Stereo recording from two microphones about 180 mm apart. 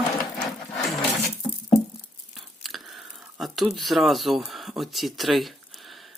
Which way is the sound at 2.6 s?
Centre (ahead or behind).